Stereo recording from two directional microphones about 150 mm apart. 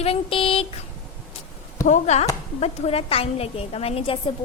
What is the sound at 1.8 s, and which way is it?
A woman's voice, 50° left (ahead or behind).